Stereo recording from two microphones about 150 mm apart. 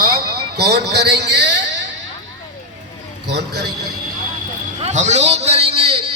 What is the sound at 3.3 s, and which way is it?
Speech, 90° right.